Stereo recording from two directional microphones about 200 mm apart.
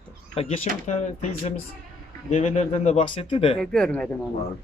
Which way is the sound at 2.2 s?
35° left (ahead or behind).